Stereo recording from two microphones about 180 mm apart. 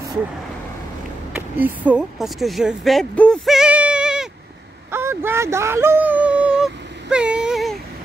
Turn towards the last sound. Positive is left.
turn(degrees=0)  # may be behind; listen again after turning